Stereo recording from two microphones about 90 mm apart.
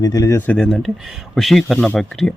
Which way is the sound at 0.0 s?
40° left (ahead or behind).